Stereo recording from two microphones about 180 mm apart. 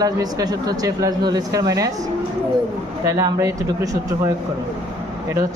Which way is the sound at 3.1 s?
20° right (ahead or behind).